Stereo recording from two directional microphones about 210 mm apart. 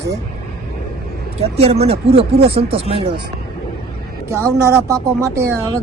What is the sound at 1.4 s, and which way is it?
Speech, 30° right (ahead or behind).